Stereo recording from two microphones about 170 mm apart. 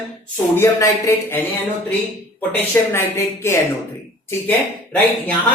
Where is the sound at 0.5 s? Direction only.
15° left (ahead or behind).